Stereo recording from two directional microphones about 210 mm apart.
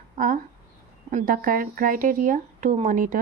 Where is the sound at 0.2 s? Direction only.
40° right (ahead or behind).